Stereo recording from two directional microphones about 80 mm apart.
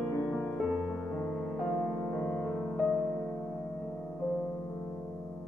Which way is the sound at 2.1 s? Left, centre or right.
Centre.